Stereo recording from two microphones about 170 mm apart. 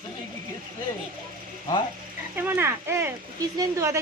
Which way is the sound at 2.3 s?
10° right (ahead or behind).